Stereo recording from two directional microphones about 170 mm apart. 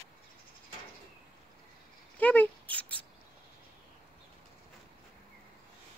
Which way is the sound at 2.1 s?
10° left (ahead or behind).